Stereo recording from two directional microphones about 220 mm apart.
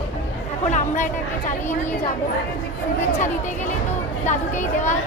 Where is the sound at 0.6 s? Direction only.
35° left (ahead or behind).